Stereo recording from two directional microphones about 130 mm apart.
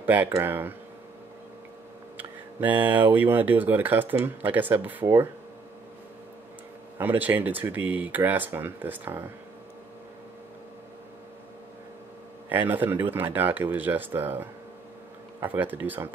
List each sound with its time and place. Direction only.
0.0 s speech: 15° right (ahead or behind)
2.1 s speech: 15° right (ahead or behind)
7.0 s speech: 15° right (ahead or behind)
12.4 s speech: 15° right (ahead or behind)